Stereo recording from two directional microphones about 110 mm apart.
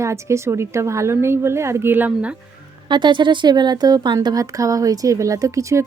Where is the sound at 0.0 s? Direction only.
25° right (ahead or behind).